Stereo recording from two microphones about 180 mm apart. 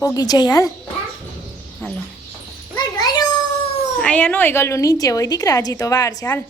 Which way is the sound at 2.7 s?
20° left (ahead or behind).